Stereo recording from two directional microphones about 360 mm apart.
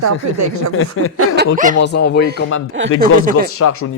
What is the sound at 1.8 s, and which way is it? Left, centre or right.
Speech, left.